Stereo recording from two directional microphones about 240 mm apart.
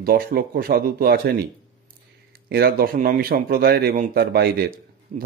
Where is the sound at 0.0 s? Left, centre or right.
Right.